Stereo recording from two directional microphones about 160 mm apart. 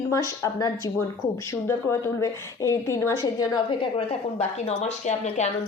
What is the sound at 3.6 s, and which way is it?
A woman's voice, 35° left (ahead or behind).